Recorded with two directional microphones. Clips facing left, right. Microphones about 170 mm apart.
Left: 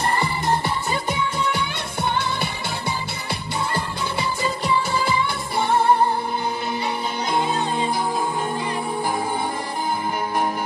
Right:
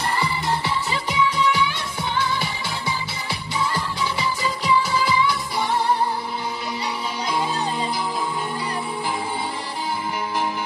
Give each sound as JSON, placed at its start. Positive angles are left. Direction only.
{"t": 0.1, "sound": "music", "side_deg": 50}
{"t": 3.5, "sound": "music", "side_deg": 55}